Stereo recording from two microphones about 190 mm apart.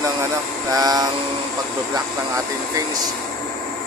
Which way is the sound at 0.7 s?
20° right (ahead or behind).